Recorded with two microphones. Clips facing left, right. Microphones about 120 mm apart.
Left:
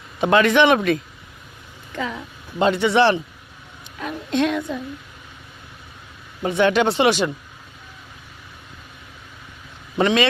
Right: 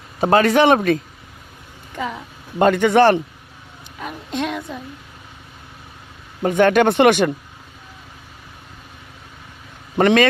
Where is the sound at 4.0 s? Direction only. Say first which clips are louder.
Left 4 dB; 5° right (ahead or behind).